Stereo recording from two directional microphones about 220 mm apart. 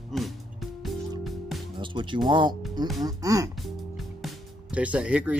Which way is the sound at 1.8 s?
20° right (ahead or behind).